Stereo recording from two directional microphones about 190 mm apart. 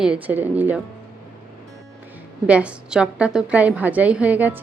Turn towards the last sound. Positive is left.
turn(degrees=-10)  # may be behind; listen again after turning